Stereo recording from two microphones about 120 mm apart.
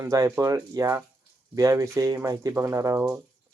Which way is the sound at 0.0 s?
25° right (ahead or behind).